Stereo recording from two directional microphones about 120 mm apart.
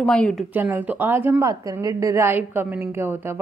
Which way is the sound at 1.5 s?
30° right (ahead or behind).